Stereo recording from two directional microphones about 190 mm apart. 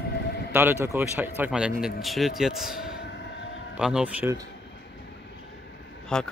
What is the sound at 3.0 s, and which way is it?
Train, 65° left (ahead or behind).